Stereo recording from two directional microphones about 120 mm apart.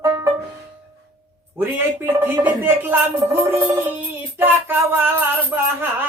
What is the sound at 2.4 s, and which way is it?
Music, 15° right (ahead or behind).